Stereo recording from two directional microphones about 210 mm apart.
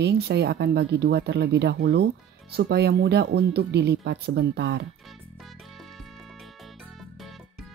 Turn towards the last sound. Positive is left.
turn(degrees=0)  # may be behind; listen again after turning